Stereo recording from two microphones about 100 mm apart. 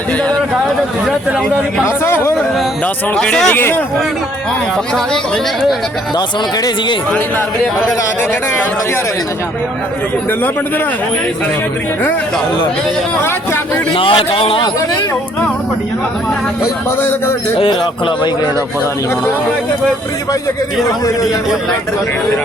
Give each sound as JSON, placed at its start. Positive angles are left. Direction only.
{"t": 2.8, "sound": "speech", "side_deg": 10}
{"t": 3.6, "sound": "speech", "side_deg": 20}
{"t": 7.1, "sound": "speech", "side_deg": 15}
{"t": 13.9, "sound": "a man's voice", "side_deg": 65}
{"t": 17.0, "sound": "speech", "side_deg": 25}
{"t": 17.6, "sound": "speech", "side_deg": 55}